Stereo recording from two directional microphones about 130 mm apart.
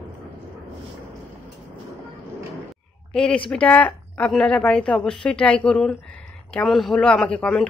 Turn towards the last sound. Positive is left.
turn(degrees=10)  # may be behind; listen again after turning